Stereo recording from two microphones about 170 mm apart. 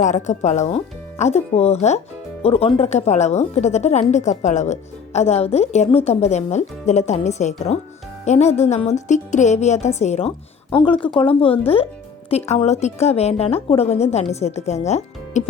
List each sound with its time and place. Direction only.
0.0 s a woman's voice: 45° left (ahead or behind)